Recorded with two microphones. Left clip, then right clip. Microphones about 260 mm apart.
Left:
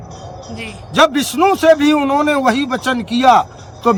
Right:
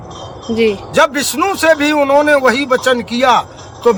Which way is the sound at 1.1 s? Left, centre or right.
Centre.